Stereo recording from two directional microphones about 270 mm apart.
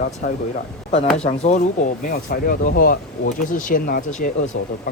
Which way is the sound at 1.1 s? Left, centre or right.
Left.